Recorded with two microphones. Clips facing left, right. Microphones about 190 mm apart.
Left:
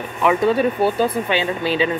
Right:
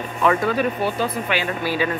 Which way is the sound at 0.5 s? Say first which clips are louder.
Left 4 dB; 25° left (ahead or behind).